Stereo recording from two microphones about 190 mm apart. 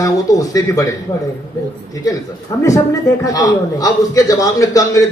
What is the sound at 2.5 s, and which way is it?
A man's voice, 15° left (ahead or behind).